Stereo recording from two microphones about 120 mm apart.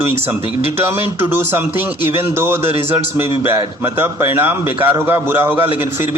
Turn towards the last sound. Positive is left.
turn(degrees=-20)  # may be behind; listen again after turning